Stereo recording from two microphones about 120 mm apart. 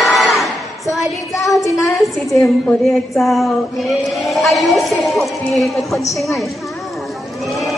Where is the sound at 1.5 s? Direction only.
25° left (ahead or behind).